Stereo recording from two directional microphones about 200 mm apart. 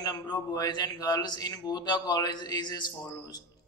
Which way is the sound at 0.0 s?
20° left (ahead or behind).